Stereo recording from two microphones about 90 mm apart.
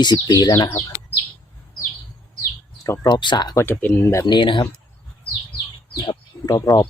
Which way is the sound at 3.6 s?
25° left (ahead or behind).